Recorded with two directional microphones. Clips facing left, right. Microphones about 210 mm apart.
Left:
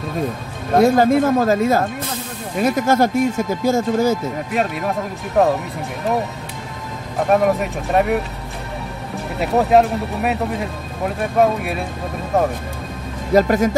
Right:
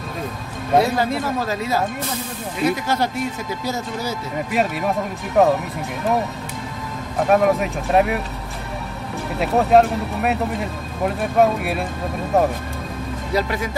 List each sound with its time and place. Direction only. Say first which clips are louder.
0.7 s speech: left 5 dB; 45° left (ahead or behind)
4.5 s speech: right 1 dB; centre (ahead or behind)
7.2 s speech: even; centre (ahead or behind)
9.4 s speech: left 1 dB; centre (ahead or behind)
13.3 s speech: left 8 dB; 45° left (ahead or behind)